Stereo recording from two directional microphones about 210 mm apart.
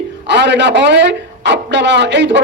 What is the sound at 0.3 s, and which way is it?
A man's voice, 55° right (ahead or behind).